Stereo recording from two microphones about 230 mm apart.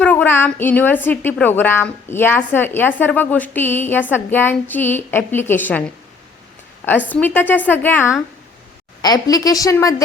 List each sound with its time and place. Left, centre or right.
0.0 s a woman's voice: centre
7.1 s a woman's voice: centre